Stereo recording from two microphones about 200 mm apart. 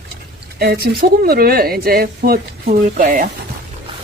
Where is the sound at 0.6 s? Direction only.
50° right (ahead or behind).